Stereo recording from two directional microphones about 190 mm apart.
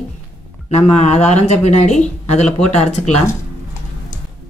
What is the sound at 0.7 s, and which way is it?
Speech, 35° left (ahead or behind).